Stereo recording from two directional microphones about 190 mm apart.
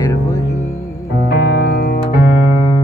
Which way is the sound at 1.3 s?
60° left (ahead or behind).